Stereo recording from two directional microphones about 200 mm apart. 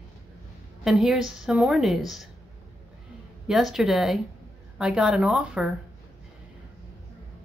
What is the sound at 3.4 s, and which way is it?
Speech, centre (ahead or behind).